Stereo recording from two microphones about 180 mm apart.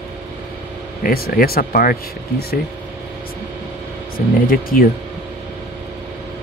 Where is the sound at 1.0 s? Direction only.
55° left (ahead or behind).